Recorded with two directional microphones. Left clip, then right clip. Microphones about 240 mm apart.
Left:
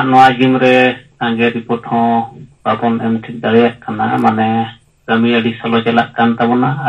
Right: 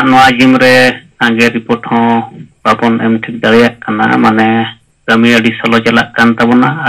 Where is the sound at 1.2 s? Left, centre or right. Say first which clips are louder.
Right 6 dB; right.